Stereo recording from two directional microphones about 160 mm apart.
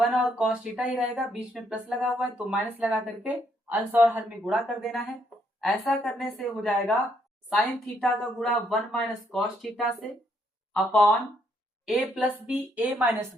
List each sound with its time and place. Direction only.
0.0 s speech: 5° right (ahead or behind)
4.5 s speech: centre (ahead or behind)
8.0 s a woman's voice: centre (ahead or behind)